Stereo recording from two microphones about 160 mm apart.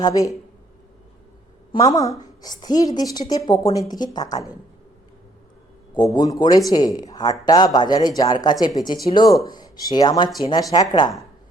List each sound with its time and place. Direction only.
0.0 s a woman's voice: 20° left (ahead or behind)
1.8 s a woman's voice: 20° left (ahead or behind)
6.1 s a woman's voice: 25° left (ahead or behind)